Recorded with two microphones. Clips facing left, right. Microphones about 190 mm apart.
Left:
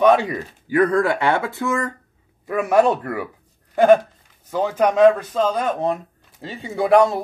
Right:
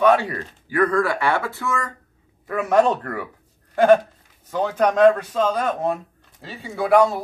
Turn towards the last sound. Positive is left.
turn(degrees=20)  # may be behind; listen again after turning